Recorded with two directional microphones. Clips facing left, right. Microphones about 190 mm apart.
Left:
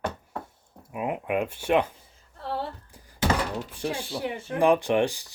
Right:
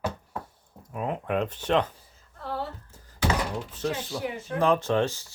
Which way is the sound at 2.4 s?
30° left (ahead or behind).